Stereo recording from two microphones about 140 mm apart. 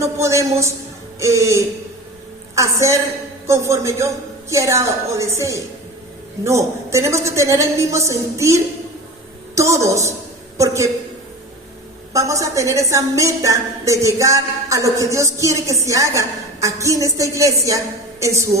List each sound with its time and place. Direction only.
0.0 s a sound: 20° right (ahead or behind)
1.2 s a woman's voice: 20° right (ahead or behind)
12.1 s a woman's voice: 25° right (ahead or behind)